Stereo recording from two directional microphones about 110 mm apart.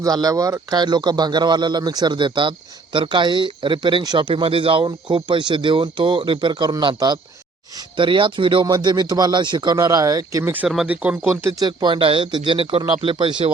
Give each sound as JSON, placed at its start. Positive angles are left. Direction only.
{"t": 0.0, "sound": "speech", "side_deg": -35}
{"t": 4.8, "sound": "speech", "side_deg": -40}
{"t": 8.6, "sound": "speech", "side_deg": -40}
{"t": 9.7, "sound": "speech", "side_deg": -35}
{"t": 10.7, "sound": "speech", "side_deg": -10}
{"t": 11.6, "sound": "speech", "side_deg": -45}